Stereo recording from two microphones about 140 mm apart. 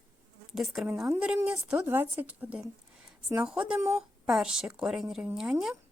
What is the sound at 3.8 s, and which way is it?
Speech, 20° right (ahead or behind).